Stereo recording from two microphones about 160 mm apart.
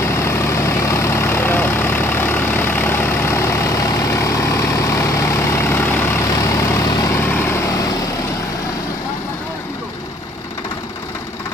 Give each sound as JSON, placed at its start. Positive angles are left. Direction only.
{"t": 0.0, "sound": "vehicle", "side_deg": 15}